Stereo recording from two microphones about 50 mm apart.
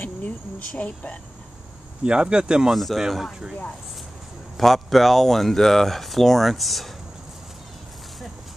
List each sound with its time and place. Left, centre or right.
0.0 s speech: left
2.0 s speech: centre
2.7 s speech: centre
4.6 s speech: centre